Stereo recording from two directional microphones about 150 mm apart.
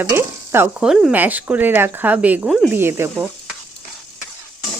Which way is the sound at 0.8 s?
5° right (ahead or behind).